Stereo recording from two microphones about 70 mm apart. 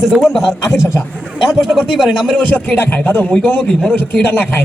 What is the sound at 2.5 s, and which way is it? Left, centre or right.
Speech, left.